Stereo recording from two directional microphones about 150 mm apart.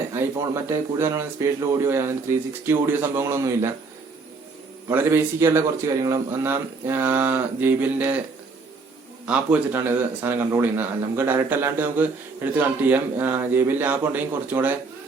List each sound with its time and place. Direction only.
0.1 s a man's voice: 15° right (ahead or behind)
4.9 s a man's voice: 15° right (ahead or behind)
9.2 s a man's voice: 10° right (ahead or behind)